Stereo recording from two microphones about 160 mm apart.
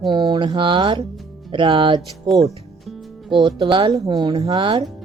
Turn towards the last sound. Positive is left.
turn(degrees=-35)  # may be behind; listen again after turning